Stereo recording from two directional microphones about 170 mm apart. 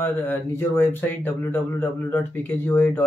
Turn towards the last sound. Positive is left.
turn(degrees=10)  # may be behind; listen again after turning